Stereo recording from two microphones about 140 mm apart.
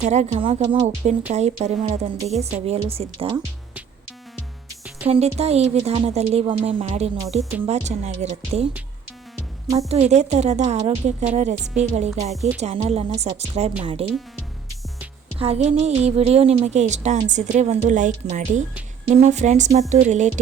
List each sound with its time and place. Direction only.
0.0 s a woman's voice: 55° right (ahead or behind)
0.6 s speech: 30° right (ahead or behind)
1.3 s a woman's voice: 50° right (ahead or behind)
5.0 s a woman's voice: 45° right (ahead or behind)
6.4 s a woman's voice: 35° right (ahead or behind)
9.9 s a woman's voice: 50° right (ahead or behind)
15.4 s a woman's voice: 50° right (ahead or behind)